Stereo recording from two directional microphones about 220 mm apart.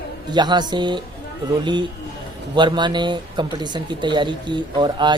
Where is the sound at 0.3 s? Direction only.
20° right (ahead or behind).